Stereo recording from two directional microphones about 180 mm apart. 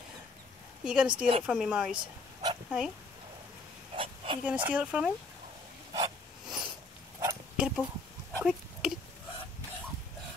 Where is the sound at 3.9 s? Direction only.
30° right (ahead or behind).